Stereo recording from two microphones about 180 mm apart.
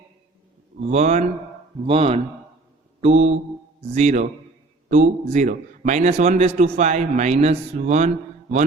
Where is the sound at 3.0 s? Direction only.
35° right (ahead or behind).